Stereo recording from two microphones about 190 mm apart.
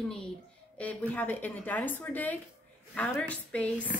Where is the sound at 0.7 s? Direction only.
10° left (ahead or behind).